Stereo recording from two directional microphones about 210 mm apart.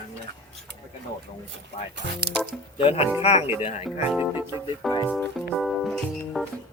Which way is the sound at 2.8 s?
25° left (ahead or behind).